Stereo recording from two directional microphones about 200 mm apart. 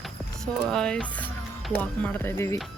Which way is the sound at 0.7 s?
5° left (ahead or behind).